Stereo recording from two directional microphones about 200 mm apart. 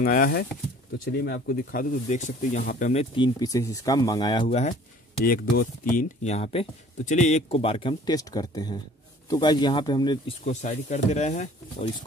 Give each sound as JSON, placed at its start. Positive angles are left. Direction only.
{"t": 0.0, "sound": "speech", "side_deg": 45}
{"t": 2.9, "sound": "speech", "side_deg": 30}
{"t": 3.3, "sound": "speech", "side_deg": 15}
{"t": 4.5, "sound": "speech", "side_deg": 35}
{"t": 5.2, "sound": "speech", "side_deg": 45}
{"t": 10.4, "sound": "speech", "side_deg": 35}